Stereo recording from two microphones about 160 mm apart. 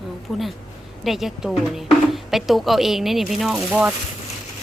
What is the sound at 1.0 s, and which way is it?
A woman's voice, centre (ahead or behind).